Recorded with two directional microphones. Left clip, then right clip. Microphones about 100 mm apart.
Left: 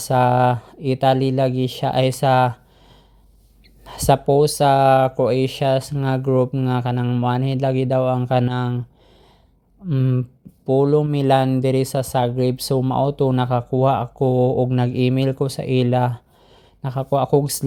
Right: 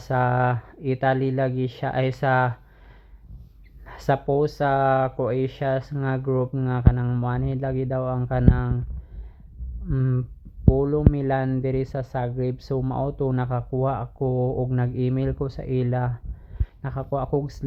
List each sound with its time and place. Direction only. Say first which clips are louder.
0.0 s speech: left 6 dB; 30° left (ahead or behind)
3.8 s speech: left 7 dB; 35° left (ahead or behind)
9.9 s speech: left 5 dB; 10° left (ahead or behind)
10.8 s speech: left 7 dB; 25° left (ahead or behind)